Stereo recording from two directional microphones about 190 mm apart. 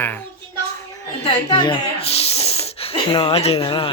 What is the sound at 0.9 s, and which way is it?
Snake, 25° left (ahead or behind).